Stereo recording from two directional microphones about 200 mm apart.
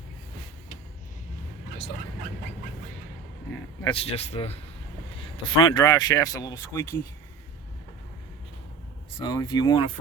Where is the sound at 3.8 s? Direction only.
25° left (ahead or behind).